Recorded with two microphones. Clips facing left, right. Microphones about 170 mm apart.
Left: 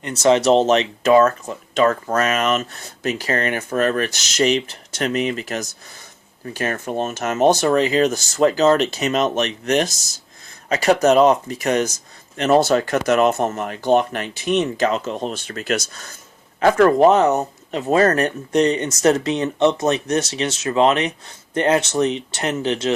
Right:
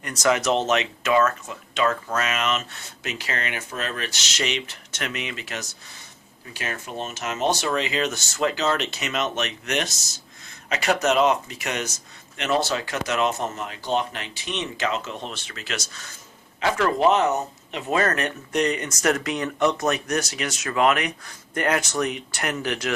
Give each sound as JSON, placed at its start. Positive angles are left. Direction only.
{"t": 0.0, "sound": "speech", "side_deg": 25}